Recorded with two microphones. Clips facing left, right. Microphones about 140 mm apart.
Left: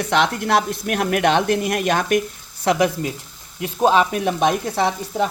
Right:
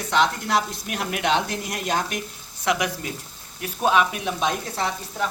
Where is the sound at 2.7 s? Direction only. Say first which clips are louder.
Left 6 dB; 35° left (ahead or behind).